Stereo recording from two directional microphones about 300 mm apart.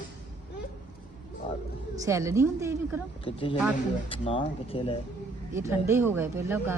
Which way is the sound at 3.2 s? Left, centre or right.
Centre.